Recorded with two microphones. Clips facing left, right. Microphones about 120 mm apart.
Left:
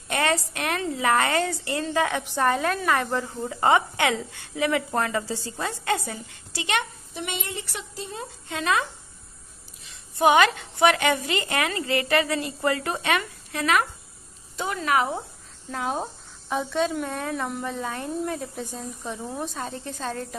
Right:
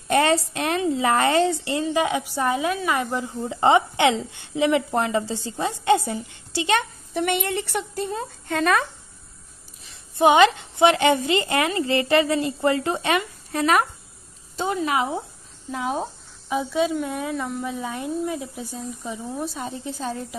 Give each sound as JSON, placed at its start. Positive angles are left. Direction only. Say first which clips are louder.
{"t": 0.1, "sound": "a woman's voice", "louder": "right 5 dB", "side_deg": -30}
{"t": 3.4, "sound": "a woman's voice", "louder": "right 3 dB", "side_deg": -25}
{"t": 7.2, "sound": "a woman's voice", "louder": "right 9 dB", "side_deg": -60}
{"t": 9.8, "sound": "a woman's voice", "louder": "right 2 dB", "side_deg": -25}
{"t": 14.6, "sound": "a woman's voice", "louder": "right 1 dB", "side_deg": -25}
{"t": 15.7, "sound": "speech", "louder": "right 2 dB", "side_deg": -5}
{"t": 19.6, "sound": "a woman's voice", "louder": "right 2 dB", "side_deg": -10}